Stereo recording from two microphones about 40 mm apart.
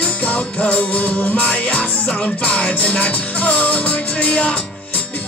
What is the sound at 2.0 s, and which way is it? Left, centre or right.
Music, left.